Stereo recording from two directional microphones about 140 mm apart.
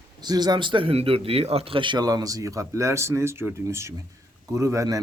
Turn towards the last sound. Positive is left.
turn(degrees=-25)  # may be behind; listen again after turning